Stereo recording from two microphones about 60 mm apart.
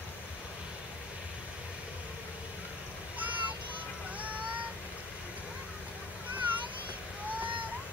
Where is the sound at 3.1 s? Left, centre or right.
Right.